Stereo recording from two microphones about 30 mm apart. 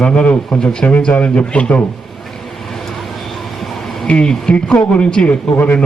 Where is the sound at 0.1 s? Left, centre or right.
Left.